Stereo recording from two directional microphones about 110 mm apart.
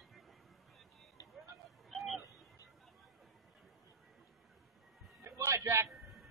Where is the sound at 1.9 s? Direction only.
Centre (ahead or behind).